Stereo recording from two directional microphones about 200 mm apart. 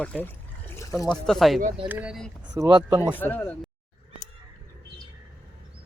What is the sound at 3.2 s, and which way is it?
Speech, 10° left (ahead or behind).